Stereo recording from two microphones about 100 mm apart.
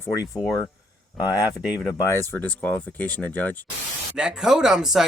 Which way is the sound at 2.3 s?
15° left (ahead or behind).